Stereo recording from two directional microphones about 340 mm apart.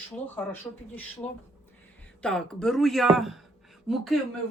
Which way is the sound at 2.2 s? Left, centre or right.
Centre.